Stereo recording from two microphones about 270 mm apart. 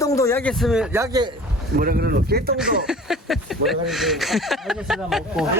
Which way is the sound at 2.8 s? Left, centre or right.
Centre.